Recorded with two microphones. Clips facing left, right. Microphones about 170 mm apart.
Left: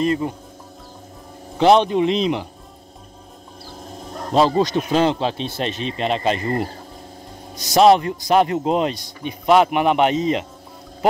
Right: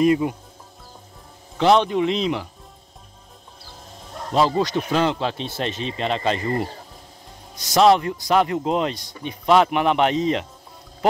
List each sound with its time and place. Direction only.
0.0 s speech: 10° right (ahead or behind)
1.6 s speech: 20° left (ahead or behind)
4.3 s speech: 25° left (ahead or behind)
7.7 s speech: 15° left (ahead or behind)